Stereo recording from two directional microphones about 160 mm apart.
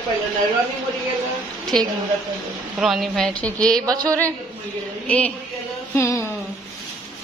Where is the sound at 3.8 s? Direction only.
25° right (ahead or behind).